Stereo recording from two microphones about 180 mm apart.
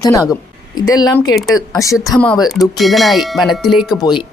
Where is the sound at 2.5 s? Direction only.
Centre (ahead or behind).